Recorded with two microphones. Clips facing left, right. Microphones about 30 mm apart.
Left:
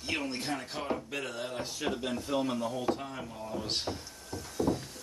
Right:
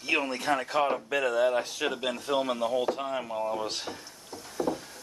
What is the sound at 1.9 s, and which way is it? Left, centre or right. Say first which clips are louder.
Speech: right 4 dB; right.